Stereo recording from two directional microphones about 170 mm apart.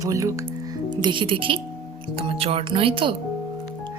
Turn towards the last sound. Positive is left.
turn(degrees=-30)  # may be behind; listen again after turning